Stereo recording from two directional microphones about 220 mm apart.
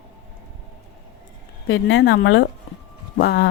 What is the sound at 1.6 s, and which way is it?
Speech, 65° left (ahead or behind).